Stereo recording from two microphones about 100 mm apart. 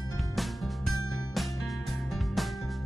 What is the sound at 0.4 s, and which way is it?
Music, centre (ahead or behind).